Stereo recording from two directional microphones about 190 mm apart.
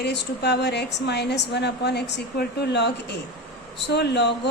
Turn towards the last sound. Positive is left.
turn(degrees=65)  # may be behind; listen again after turning